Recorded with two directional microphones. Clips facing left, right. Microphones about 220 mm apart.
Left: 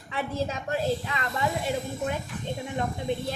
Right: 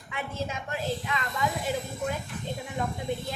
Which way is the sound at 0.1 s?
35° left (ahead or behind).